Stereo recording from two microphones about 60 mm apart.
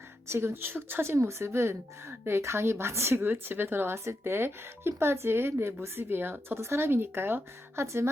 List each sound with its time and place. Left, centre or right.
0.3 s speech: right
1.1 s a woman's voice: right